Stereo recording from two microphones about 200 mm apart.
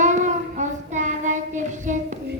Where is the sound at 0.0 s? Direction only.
35° right (ahead or behind).